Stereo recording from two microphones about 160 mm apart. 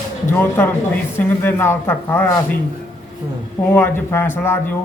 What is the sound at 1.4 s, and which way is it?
Speech, 15° left (ahead or behind).